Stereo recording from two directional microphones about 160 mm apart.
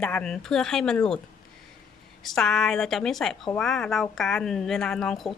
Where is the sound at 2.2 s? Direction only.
Centre (ahead or behind).